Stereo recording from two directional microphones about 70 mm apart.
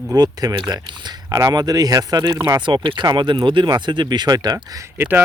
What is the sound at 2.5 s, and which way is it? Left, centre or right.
Speech, right.